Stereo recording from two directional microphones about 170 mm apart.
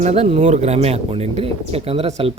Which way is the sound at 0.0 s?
40° right (ahead or behind).